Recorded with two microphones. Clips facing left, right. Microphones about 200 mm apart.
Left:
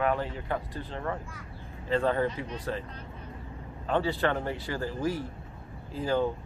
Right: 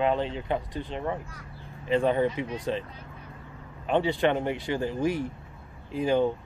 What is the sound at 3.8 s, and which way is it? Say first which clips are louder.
Speech: right 3 dB; 20° right (ahead or behind).